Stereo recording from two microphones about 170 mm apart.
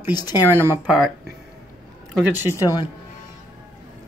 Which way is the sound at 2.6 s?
20° left (ahead or behind).